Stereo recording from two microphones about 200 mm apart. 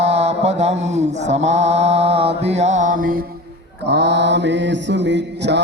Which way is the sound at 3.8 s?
60° right (ahead or behind).